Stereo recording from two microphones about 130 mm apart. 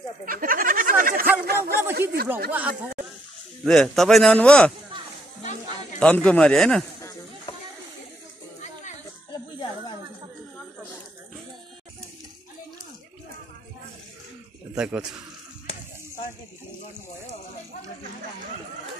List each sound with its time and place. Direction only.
0.2 s a sound: 90° right
1.3 s speech: 15° right (ahead or behind)
3.6 s a man's voice: 5° left (ahead or behind)
5.9 s a man's voice: 10° left (ahead or behind)
9.3 s a sound: 40° left (ahead or behind)
14.8 s speech: 5° right (ahead or behind)